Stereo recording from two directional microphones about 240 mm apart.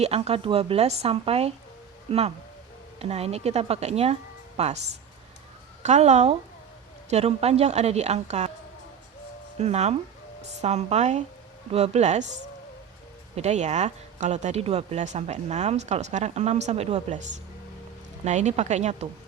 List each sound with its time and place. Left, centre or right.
0.0 s speech: right
5.8 s speech: right
9.6 s speech: right
13.3 s speech: right